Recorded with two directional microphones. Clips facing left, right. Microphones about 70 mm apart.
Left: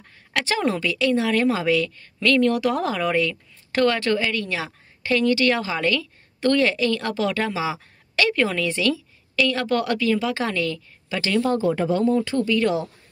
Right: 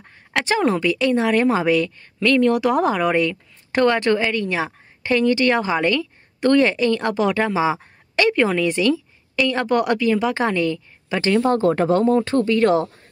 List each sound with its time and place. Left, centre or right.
0.0 s a woman's voice: right
11.5 s speech: right